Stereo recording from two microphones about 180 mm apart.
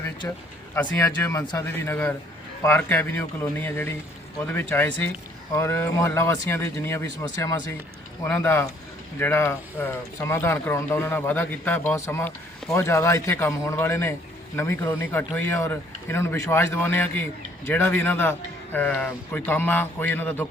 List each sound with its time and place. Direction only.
0.2 s speech: 15° left (ahead or behind)